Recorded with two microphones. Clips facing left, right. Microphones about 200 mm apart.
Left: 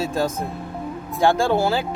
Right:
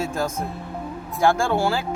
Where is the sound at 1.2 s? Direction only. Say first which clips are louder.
Left 2 dB; 20° left (ahead or behind).